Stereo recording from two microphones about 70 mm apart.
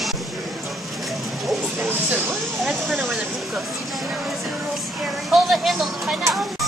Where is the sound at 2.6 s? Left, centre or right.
Centre.